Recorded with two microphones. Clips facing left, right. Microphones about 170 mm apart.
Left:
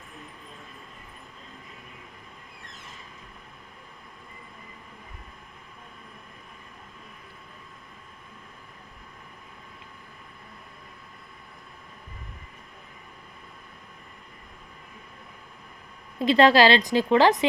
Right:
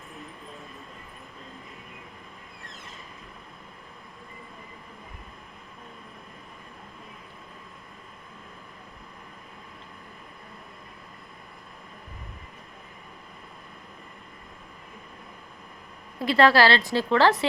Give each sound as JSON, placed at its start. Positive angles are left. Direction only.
{"t": 16.1, "sound": "a woman's voice", "side_deg": 20}